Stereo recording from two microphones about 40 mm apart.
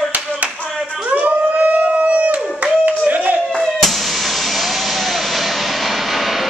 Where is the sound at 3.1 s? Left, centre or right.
Right.